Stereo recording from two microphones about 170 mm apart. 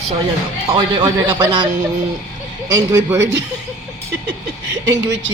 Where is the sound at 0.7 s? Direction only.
30° right (ahead or behind).